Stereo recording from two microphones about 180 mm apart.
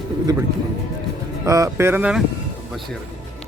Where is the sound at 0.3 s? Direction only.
20° right (ahead or behind).